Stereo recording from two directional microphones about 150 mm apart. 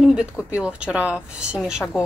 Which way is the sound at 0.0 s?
5° right (ahead or behind).